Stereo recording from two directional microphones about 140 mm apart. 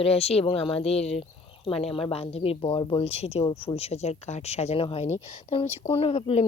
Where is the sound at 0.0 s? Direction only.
45° left (ahead or behind).